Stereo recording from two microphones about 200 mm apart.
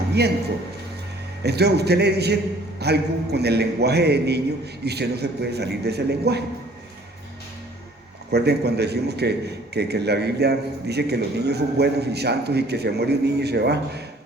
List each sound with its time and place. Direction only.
1.5 s a man's voice: 55° right (ahead or behind)
8.3 s a man's voice: 55° right (ahead or behind)